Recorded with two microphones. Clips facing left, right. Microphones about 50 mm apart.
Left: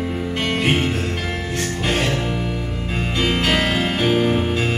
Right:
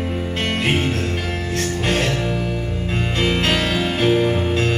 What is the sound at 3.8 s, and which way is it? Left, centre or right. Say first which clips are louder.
Music: right 1 dB; centre.